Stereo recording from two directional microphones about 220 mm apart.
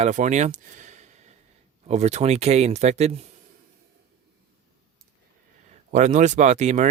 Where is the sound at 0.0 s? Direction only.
35° right (ahead or behind).